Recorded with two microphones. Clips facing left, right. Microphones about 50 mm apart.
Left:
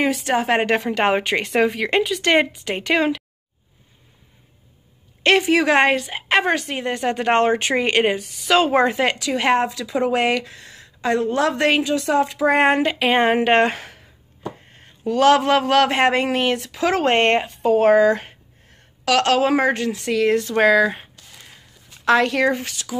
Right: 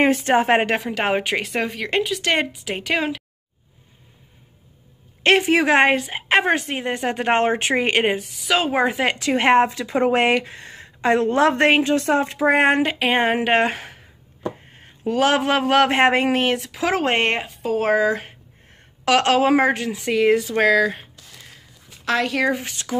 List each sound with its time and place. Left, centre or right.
0.0 s a woman's voice: right
0.6 s a woman's voice: centre
5.2 s speech: centre
8.4 s a woman's voice: centre
9.2 s speech: right
12.4 s speech: centre
19.0 s speech: centre
20.5 s a woman's voice: centre
22.9 s speech: right